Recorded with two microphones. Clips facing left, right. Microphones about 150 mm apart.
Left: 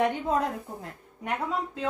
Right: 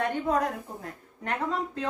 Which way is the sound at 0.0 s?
15° left (ahead or behind).